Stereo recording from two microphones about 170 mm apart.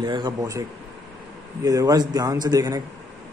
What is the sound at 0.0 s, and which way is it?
A man's voice, 25° right (ahead or behind).